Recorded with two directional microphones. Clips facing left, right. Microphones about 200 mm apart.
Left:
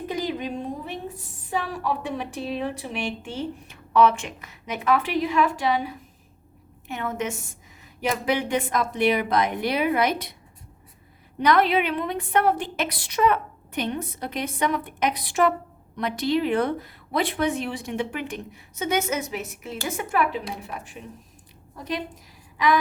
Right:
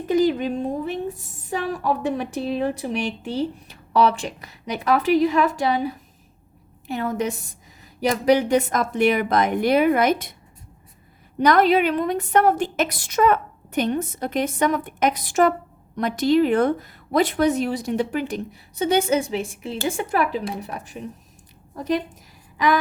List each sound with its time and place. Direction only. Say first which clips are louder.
0.1 s a woman's voice: right 10 dB; 50° right (ahead or behind)
11.3 s a woman's voice: right 4 dB; 45° right (ahead or behind)
22.5 s a sound: right 1 dB; 45° right (ahead or behind)